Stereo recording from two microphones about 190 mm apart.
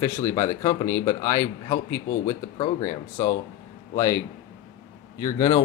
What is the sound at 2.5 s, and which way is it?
Speech, 40° left (ahead or behind).